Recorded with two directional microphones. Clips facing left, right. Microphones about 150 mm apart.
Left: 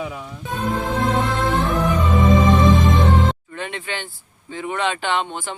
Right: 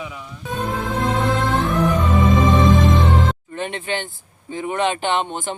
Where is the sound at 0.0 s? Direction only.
30° left (ahead or behind).